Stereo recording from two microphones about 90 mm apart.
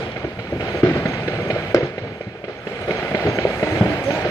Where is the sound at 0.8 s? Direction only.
40° left (ahead or behind).